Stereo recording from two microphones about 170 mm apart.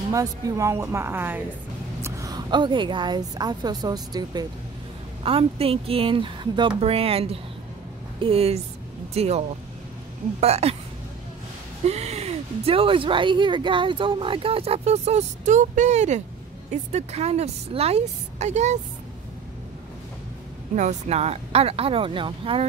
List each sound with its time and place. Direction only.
0.1 s a woman's voice: 20° right (ahead or behind)
5.2 s speech: 35° right (ahead or behind)
10.4 s speech: 40° right (ahead or behind)
11.8 s speech: 40° right (ahead or behind)
20.7 s speech: 40° right (ahead or behind)